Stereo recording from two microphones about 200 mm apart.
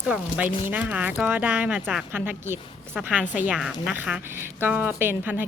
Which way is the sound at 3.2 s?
40° left (ahead or behind).